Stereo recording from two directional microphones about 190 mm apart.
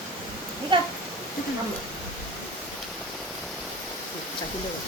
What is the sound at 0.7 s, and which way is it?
Speech, 25° right (ahead or behind).